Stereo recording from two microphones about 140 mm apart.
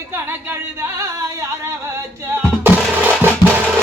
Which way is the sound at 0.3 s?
15° right (ahead or behind).